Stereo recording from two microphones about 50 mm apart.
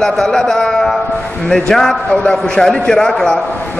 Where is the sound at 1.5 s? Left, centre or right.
Centre.